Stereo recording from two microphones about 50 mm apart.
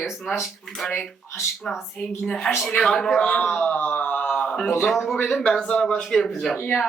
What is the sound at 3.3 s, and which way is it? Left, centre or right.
Speech, centre.